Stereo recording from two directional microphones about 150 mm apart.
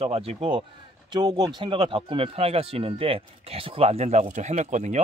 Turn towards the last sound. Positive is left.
turn(degrees=-55)  # may be behind; listen again after turning